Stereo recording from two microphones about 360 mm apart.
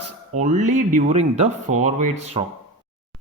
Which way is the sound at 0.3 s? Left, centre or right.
Centre.